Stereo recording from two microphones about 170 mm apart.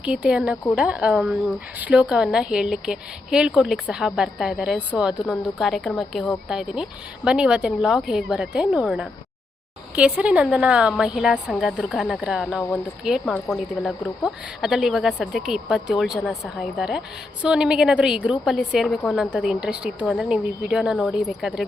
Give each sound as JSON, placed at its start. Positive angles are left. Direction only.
{"t": 0.0, "sound": "a woman's voice", "side_deg": -5}